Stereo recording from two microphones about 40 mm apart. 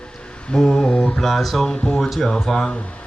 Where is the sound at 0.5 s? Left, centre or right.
Centre.